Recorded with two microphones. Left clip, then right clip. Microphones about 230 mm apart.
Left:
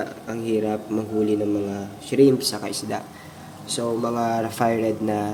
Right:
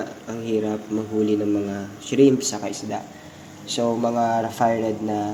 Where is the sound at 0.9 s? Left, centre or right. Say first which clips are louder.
Even; centre.